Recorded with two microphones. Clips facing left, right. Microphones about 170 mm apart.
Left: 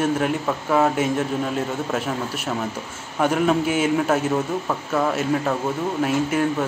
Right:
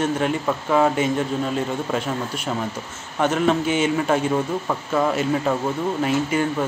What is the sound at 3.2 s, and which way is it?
Speech, 5° left (ahead or behind).